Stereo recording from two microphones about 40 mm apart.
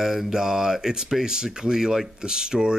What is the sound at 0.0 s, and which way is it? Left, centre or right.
Speech, centre.